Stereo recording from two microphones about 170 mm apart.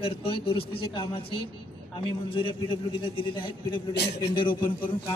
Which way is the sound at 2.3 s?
30° left (ahead or behind).